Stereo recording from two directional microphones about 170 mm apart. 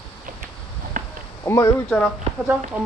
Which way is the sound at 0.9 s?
55° right (ahead or behind).